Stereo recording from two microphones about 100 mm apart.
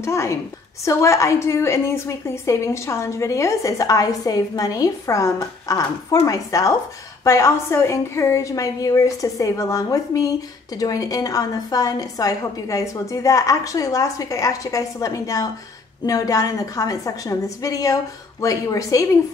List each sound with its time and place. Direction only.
0.0 s a woman's voice: 30° left (ahead or behind)